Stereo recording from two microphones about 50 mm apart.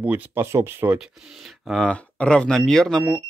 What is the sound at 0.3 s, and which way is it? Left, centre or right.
Speech, right.